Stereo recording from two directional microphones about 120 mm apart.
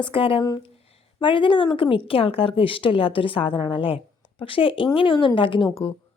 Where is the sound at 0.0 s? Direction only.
50° left (ahead or behind).